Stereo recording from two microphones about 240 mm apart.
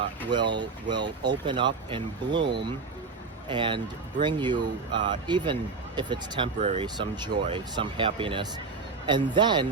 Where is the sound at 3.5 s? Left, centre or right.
Centre.